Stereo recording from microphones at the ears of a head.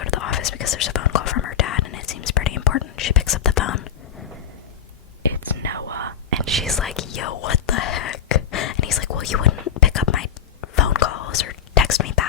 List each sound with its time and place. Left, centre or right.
0.0 s whispering: left
5.6 s whispering: right
6.9 s whispering: left